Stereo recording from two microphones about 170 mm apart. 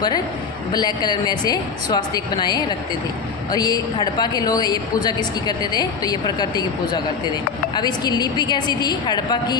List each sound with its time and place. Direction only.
0.7 s a woman's voice: 25° left (ahead or behind)